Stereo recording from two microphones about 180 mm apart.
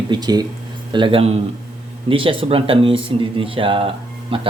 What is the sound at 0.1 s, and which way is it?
Speech, 20° right (ahead or behind).